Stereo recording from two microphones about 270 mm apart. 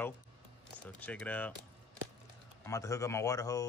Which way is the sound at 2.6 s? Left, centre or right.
Centre.